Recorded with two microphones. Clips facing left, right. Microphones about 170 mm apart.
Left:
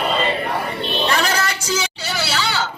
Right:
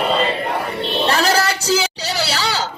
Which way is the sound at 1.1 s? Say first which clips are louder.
Right 6 dB; 35° right (ahead or behind).